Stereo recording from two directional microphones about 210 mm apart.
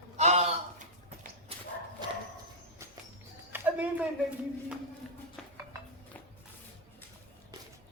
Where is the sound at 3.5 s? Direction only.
5° right (ahead or behind).